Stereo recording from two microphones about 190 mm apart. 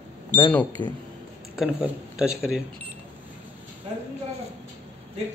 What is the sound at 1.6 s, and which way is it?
A man's voice, 5° right (ahead or behind).